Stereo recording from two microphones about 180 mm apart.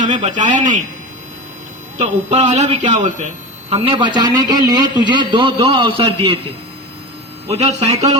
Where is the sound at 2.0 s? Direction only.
40° right (ahead or behind).